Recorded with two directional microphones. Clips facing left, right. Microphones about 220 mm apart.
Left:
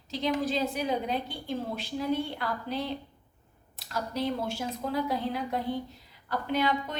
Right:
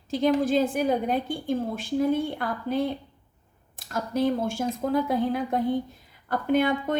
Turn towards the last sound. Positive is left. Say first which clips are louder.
# right 6 dB
turn(degrees=-50)  # may be behind; listen again after turning